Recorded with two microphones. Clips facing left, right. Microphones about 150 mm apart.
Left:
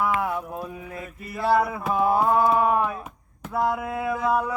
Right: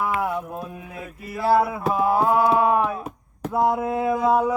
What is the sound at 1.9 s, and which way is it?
Speech, centre (ahead or behind).